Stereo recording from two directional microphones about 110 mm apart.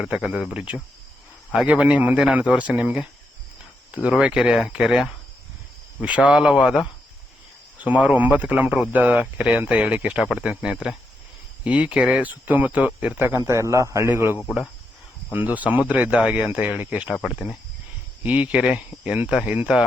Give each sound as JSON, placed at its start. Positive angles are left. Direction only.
{"t": 0.0, "sound": "speech", "side_deg": -5}
{"t": 7.8, "sound": "a man's voice", "side_deg": -15}
{"t": 17.2, "sound": "speech", "side_deg": -5}